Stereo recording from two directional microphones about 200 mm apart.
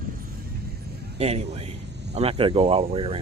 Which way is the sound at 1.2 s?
30° right (ahead or behind).